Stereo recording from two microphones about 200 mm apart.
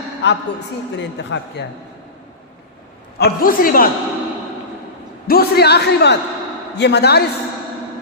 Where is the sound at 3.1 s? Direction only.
50° left (ahead or behind).